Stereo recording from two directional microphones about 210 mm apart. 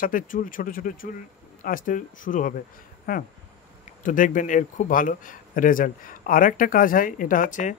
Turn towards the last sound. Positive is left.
turn(degrees=35)  # may be behind; listen again after turning